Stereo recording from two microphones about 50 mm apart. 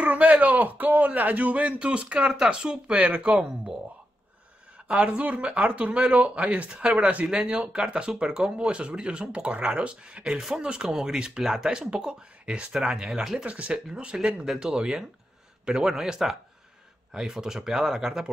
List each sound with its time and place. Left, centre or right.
0.0 s speech: right
4.8 s speech: right
13.5 s speech: right
13.8 s speech: centre